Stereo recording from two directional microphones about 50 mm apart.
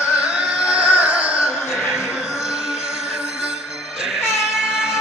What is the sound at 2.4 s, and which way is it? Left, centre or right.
Music, centre.